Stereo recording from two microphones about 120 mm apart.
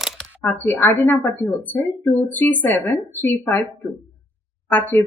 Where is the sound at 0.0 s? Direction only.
Centre (ahead or behind).